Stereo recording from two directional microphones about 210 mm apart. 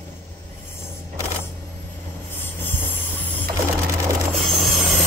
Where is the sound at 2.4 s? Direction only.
10° left (ahead or behind).